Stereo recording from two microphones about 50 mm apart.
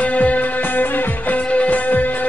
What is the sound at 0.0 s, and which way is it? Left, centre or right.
Music, left.